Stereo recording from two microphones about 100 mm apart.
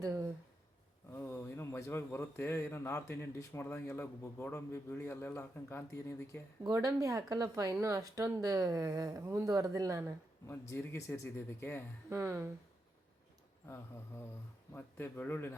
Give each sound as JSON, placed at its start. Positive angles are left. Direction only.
{"t": 0.0, "sound": "a sound", "side_deg": -35}
{"t": 1.1, "sound": "speech", "side_deg": 25}
{"t": 6.7, "sound": "speech", "side_deg": -30}
{"t": 10.4, "sound": "speech", "side_deg": 25}
{"t": 12.0, "sound": "speech", "side_deg": -25}
{"t": 13.7, "sound": "speech", "side_deg": 25}